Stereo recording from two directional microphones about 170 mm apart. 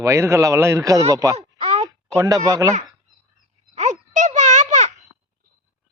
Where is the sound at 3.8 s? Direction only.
45° right (ahead or behind).